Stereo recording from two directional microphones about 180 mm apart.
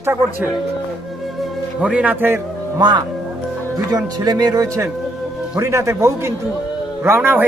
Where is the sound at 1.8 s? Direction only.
5° right (ahead or behind).